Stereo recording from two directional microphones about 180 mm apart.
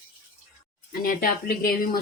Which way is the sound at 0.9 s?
55° left (ahead or behind).